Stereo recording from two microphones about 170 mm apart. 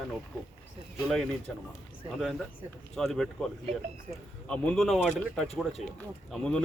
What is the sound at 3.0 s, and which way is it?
Speech, centre (ahead or behind).